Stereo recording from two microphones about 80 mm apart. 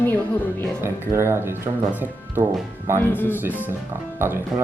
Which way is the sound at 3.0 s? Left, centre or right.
Left.